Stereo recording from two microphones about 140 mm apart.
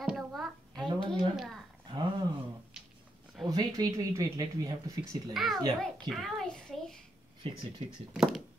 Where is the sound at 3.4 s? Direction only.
25° right (ahead or behind).